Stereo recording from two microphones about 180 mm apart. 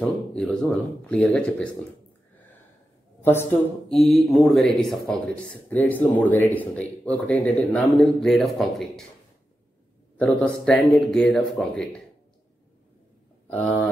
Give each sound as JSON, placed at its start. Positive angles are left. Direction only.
{"t": 0.0, "sound": "speech", "side_deg": 5}
{"t": 3.2, "sound": "a sound", "side_deg": 10}
{"t": 3.9, "sound": "speech", "side_deg": 0}
{"t": 10.1, "sound": "speech", "side_deg": 5}